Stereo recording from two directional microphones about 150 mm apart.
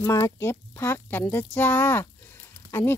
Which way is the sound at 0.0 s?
15° left (ahead or behind).